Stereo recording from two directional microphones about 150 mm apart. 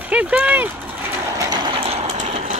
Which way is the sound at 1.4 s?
30° right (ahead or behind).